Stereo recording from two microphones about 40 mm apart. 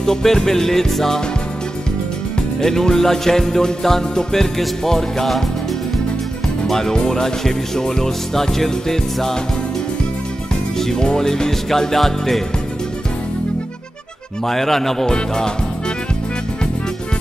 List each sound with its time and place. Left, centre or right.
0.0 s music: centre
2.6 s music: centre
6.7 s music: centre
10.8 s music: centre
14.4 s music: centre